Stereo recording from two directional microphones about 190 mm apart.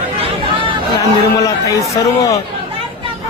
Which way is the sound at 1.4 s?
15° left (ahead or behind).